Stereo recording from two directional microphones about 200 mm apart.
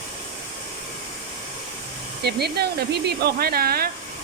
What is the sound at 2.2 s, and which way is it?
Speech, 55° right (ahead or behind).